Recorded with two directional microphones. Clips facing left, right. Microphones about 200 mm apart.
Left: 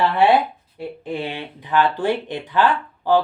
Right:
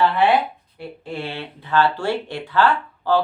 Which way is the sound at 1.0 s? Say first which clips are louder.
Left 2 dB; 15° left (ahead or behind).